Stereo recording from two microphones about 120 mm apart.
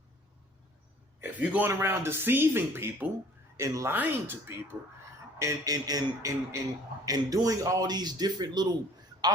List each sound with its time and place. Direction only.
1.2 s speech: 15° right (ahead or behind); by 8.6 s 35° right (ahead or behind)